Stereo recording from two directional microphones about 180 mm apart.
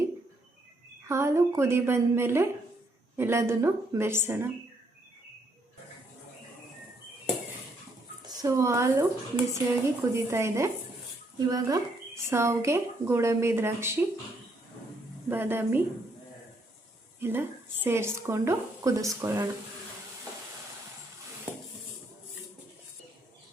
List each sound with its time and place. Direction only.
1.0 s speech: 15° right (ahead or behind)
8.3 s speech: 20° right (ahead or behind)
15.3 s speech: 10° right (ahead or behind)
17.2 s a woman's voice: 10° right (ahead or behind)